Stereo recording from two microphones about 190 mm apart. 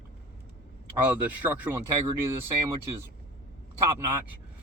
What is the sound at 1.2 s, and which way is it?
Speech, 10° right (ahead or behind).